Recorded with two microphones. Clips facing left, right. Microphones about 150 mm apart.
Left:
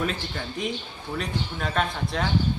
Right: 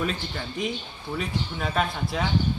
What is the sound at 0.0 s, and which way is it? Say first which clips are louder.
Speech: even; centre (ahead or behind).